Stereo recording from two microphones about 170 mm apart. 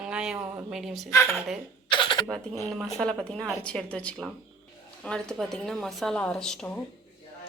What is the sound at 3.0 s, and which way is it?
A woman's voice, 5° left (ahead or behind).